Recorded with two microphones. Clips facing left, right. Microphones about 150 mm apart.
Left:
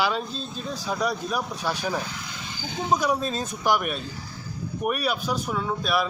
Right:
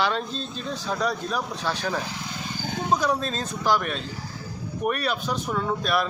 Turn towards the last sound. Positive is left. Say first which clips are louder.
# right 1 dB
turn(degrees=5)  # may be behind; listen again after turning